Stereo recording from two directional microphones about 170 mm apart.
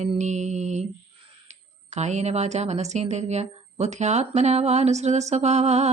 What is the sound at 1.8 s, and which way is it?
A woman's voice, 40° right (ahead or behind).